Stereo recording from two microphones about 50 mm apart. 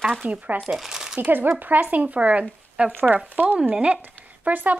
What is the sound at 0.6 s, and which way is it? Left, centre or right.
Speech, centre.